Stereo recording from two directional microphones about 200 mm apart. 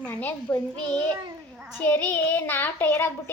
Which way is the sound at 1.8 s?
10° left (ahead or behind).